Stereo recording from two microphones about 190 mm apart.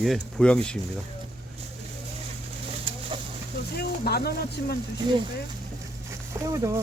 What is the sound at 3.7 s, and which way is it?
Speech, 55° left (ahead or behind).